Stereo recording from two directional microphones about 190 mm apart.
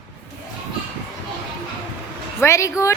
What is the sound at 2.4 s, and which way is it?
Speech, 15° left (ahead or behind).